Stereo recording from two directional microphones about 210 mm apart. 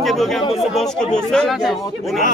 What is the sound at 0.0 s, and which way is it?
Chatter, centre (ahead or behind).